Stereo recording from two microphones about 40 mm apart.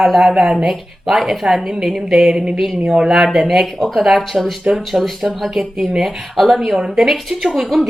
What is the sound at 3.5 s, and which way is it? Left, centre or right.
A woman's voice, centre.